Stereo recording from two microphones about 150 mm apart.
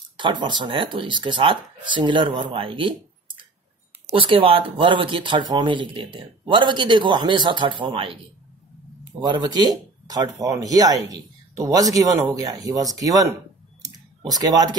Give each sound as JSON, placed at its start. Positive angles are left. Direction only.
{"t": 0.2, "sound": "speech", "side_deg": -30}
{"t": 9.2, "sound": "speech", "side_deg": -30}
{"t": 13.8, "sound": "typing", "side_deg": -25}